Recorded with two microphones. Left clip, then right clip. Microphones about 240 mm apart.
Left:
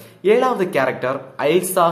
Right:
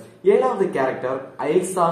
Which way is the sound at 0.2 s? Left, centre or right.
Left.